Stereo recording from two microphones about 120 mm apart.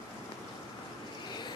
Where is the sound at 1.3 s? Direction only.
40° left (ahead or behind).